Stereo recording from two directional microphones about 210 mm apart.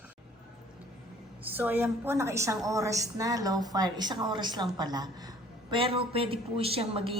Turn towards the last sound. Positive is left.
turn(degrees=-25)  # may be behind; listen again after turning